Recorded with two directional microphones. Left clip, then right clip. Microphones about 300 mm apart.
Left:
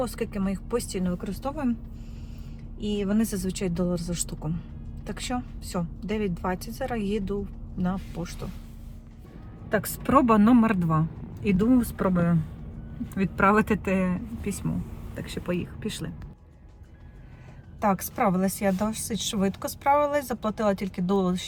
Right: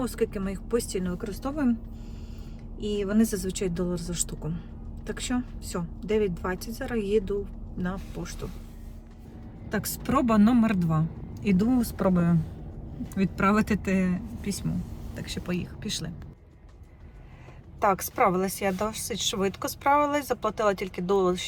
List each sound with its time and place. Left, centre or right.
0.0 s speech: centre
2.8 s speech: centre
9.7 s speech: centre
17.7 s speech: centre